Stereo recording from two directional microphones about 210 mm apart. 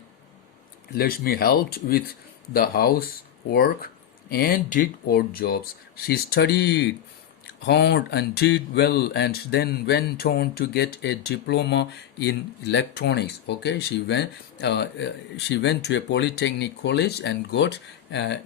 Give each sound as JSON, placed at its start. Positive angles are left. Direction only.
{"t": 0.9, "sound": "speech", "side_deg": 45}